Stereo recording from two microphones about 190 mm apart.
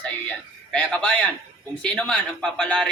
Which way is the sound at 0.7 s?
5° left (ahead or behind).